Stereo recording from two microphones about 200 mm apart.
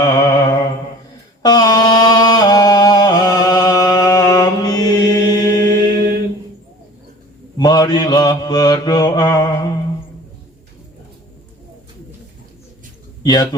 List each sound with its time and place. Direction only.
0.0 s mantra: 20° left (ahead or behind)
1.4 s a sound: 20° left (ahead or behind)
5.9 s mantra: 50° right (ahead or behind)
7.5 s mantra: 20° left (ahead or behind)
13.2 s mantra: 20° left (ahead or behind)